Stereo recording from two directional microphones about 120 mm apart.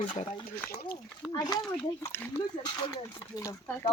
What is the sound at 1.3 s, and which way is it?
Speech, 35° left (ahead or behind).